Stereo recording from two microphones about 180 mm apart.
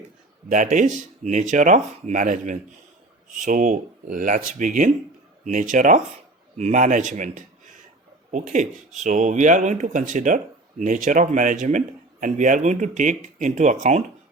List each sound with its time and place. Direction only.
0.4 s speech: 45° right (ahead or behind)